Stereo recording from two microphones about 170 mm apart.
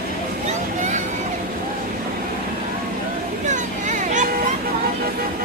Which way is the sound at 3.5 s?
45° right (ahead or behind).